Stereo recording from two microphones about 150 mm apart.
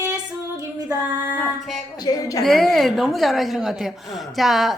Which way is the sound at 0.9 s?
10° right (ahead or behind).